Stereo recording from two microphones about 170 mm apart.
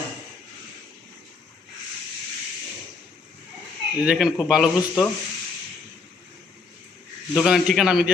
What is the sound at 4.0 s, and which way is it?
A man's voice, 5° right (ahead or behind).